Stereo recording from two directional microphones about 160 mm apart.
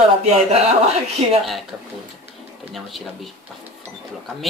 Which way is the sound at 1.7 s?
5° right (ahead or behind).